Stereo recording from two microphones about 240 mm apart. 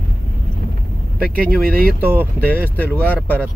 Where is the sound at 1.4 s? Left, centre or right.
Right.